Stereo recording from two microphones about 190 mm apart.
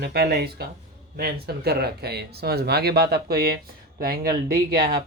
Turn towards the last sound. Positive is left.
turn(degrees=-50)  # may be behind; listen again after turning